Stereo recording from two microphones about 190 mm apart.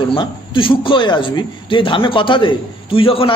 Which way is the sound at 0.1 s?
25° left (ahead or behind).